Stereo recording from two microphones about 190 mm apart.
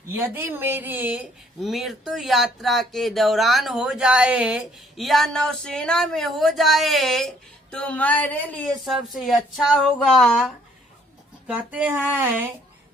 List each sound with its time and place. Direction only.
0.2 s speech: 10° right (ahead or behind)